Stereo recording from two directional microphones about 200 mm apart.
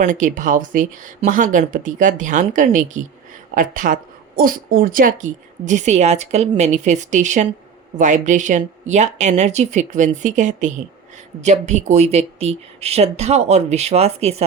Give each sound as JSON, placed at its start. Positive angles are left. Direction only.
{"t": 0.0, "sound": "speech", "side_deg": -40}